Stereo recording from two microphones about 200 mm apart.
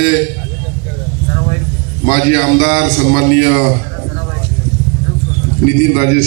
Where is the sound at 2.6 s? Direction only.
55° left (ahead or behind).